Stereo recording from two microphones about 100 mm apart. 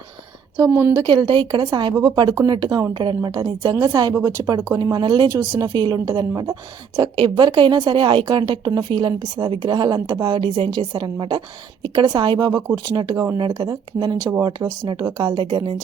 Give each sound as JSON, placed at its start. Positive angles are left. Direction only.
{"t": 0.7, "sound": "speech", "side_deg": -20}
{"t": 1.0, "sound": "a woman's voice", "side_deg": -50}
{"t": 3.6, "sound": "a woman's voice", "side_deg": -40}
{"t": 4.1, "sound": "speech", "side_deg": -30}
{"t": 4.7, "sound": "a woman's voice", "side_deg": -40}
{"t": 5.3, "sound": "a woman's voice", "side_deg": -35}
{"t": 7.2, "sound": "a woman's voice", "side_deg": -50}